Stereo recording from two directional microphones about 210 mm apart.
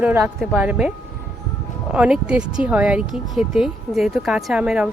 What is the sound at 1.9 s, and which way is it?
Speech, 5° right (ahead or behind).